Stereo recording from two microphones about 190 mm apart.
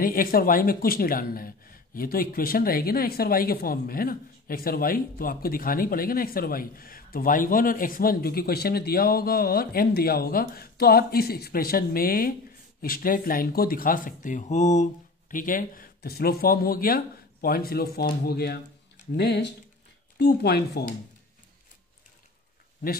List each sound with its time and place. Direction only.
0.0 s speech: 50° left (ahead or behind)